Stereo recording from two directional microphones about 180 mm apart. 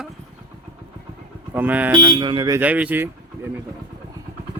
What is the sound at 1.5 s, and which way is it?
Speech, 10° right (ahead or behind).